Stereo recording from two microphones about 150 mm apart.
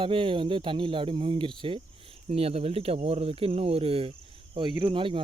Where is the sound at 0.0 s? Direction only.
35° right (ahead or behind).